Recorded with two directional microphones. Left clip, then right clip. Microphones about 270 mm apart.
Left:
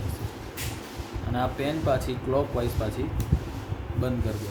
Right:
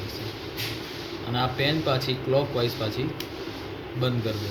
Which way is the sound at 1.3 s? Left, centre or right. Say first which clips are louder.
Right 3 dB; centre.